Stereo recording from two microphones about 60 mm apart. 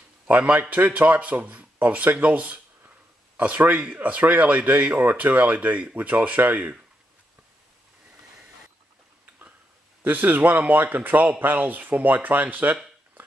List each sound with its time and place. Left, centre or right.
0.3 s speech: right
10.0 s speech: right